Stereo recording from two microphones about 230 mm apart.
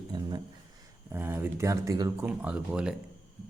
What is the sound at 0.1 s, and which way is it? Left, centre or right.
Speech, centre.